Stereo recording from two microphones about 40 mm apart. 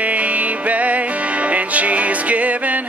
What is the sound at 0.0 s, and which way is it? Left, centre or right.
Music, right.